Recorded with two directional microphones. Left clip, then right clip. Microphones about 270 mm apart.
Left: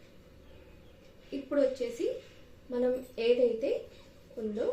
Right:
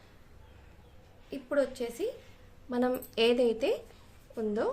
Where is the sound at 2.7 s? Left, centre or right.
Right.